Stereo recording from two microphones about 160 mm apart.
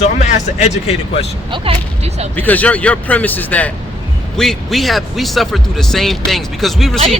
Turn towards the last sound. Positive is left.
turn(degrees=0)  # may be behind; listen again after turning